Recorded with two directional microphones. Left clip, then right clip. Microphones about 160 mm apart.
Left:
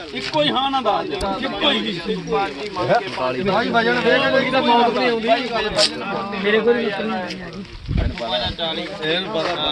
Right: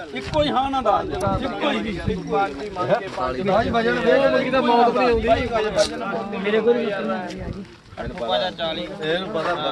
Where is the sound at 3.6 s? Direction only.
35° right (ahead or behind).